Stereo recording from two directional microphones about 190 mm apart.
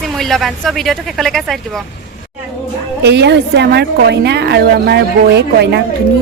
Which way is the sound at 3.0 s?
60° right (ahead or behind).